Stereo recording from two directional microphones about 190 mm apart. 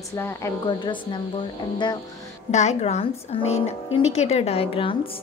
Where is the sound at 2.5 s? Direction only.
35° left (ahead or behind).